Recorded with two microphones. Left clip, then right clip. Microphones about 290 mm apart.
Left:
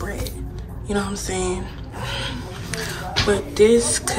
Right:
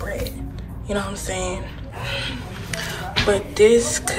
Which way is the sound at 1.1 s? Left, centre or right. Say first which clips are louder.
Left 1 dB; centre.